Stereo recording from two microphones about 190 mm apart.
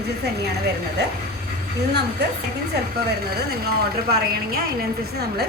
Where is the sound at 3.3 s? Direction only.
55° right (ahead or behind).